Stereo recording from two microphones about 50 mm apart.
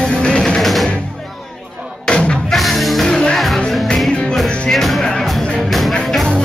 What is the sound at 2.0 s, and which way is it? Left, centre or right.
Music, centre.